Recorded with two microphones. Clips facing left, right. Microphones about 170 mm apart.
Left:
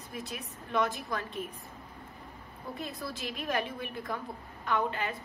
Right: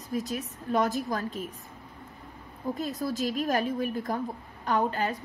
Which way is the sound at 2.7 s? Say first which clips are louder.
Right 8 dB; 40° right (ahead or behind).